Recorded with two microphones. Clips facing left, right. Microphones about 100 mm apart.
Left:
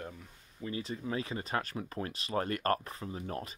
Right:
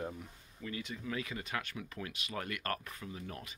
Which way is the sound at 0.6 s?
30° left (ahead or behind).